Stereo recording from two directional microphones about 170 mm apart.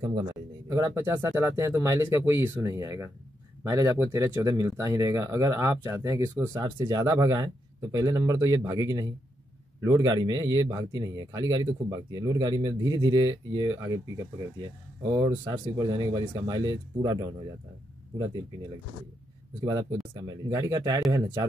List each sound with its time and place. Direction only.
0.7 s a man's voice: 20° right (ahead or behind)
19.6 s a man's voice: 20° right (ahead or behind)